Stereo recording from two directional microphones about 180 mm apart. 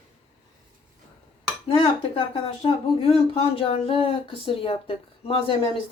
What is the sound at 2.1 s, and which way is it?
Speech, 30° left (ahead or behind).